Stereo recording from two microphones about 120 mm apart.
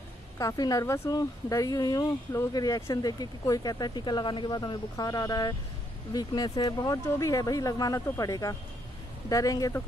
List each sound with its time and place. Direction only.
0.4 s speech: 30° left (ahead or behind)